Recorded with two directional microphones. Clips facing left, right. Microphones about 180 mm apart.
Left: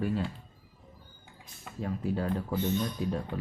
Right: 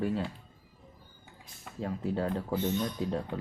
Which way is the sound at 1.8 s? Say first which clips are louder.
Even; 25° right (ahead or behind).